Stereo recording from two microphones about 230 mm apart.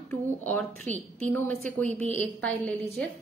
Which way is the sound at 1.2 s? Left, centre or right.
Centre.